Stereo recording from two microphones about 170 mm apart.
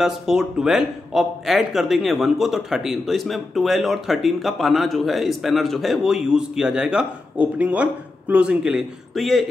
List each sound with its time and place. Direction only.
0.0 s a man's voice: 5° right (ahead or behind)